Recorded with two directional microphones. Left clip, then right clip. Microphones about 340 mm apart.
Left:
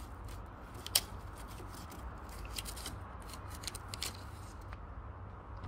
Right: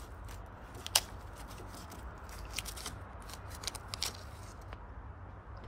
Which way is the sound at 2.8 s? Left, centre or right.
Centre.